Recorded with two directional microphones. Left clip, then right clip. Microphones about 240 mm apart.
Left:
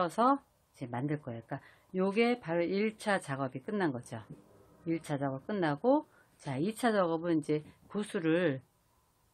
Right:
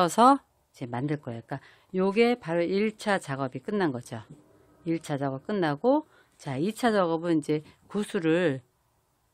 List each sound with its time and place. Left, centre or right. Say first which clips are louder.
0.0 s speech: right 9 dB; right